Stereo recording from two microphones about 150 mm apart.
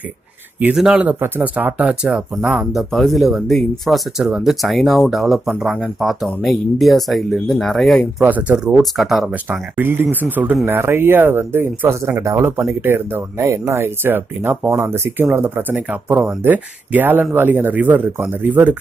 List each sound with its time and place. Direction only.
0.6 s speech: 5° right (ahead or behind)
8.2 s speech: 10° right (ahead or behind)